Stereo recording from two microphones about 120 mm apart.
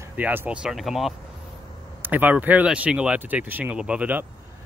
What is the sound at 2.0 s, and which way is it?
Speech, 15° right (ahead or behind).